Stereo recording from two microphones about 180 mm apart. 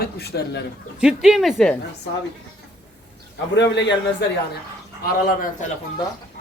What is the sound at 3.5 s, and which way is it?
Speech, 75° left (ahead or behind).